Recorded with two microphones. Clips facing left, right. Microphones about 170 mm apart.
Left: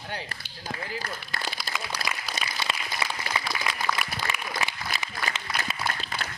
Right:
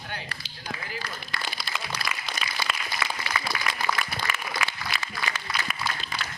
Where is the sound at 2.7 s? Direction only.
30° left (ahead or behind).